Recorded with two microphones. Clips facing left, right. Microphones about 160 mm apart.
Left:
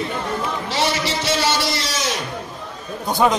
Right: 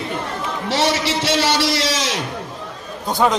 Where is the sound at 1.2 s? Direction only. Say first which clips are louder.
Right 3 dB; 90° right.